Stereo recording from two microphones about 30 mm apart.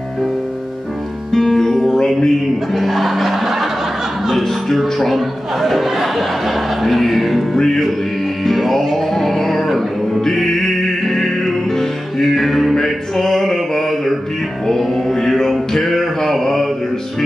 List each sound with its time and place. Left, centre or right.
1.3 s music: centre
2.1 s a sound: centre
2.8 s music: centre
4.4 s a man's voice: centre
7.5 s a sound: centre
8.5 s music: centre
12.7 s music: centre